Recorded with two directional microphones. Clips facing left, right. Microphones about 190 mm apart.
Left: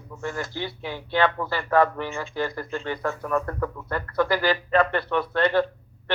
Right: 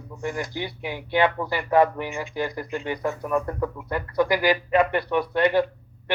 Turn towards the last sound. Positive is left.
turn(degrees=-15)  # may be behind; listen again after turning